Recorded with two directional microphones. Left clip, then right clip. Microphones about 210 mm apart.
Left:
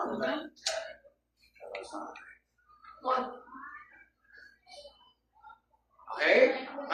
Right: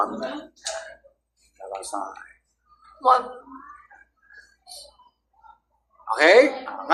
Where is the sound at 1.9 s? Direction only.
50° right (ahead or behind).